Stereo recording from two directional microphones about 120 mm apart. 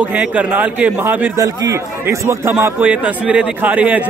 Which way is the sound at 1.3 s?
25° right (ahead or behind).